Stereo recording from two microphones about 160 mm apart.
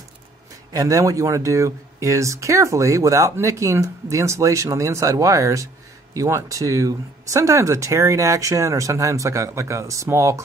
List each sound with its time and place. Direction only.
0.7 s speech: 20° right (ahead or behind)